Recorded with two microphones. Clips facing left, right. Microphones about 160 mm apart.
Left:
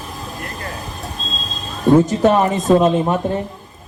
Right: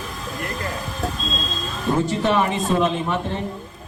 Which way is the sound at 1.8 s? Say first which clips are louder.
Left 8 dB; 40° left (ahead or behind).